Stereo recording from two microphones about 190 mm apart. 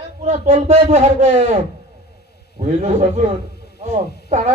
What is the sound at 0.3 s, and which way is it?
Speech, 35° right (ahead or behind).